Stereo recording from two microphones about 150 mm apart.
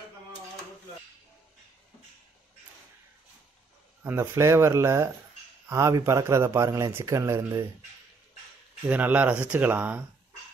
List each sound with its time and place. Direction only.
4.0 s speech: 15° right (ahead or behind)
8.8 s speech: 10° right (ahead or behind)